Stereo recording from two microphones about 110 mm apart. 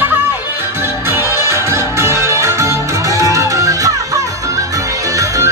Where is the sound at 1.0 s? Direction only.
25° right (ahead or behind).